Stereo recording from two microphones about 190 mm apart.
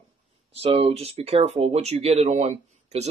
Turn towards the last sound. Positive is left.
turn(degrees=-35)  # may be behind; listen again after turning